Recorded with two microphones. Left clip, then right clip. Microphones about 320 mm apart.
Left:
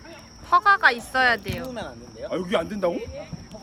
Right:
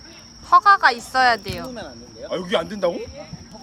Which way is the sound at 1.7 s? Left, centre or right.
Left.